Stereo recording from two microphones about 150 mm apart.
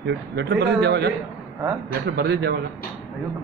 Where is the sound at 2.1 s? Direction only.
90° right.